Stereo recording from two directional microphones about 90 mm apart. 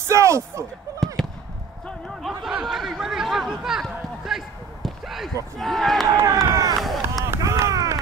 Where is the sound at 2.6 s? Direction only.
5° right (ahead or behind).